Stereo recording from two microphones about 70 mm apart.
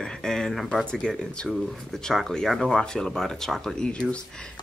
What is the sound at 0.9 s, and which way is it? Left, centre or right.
Speech, centre.